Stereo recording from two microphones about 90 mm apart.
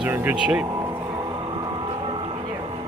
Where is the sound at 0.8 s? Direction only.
45° right (ahead or behind).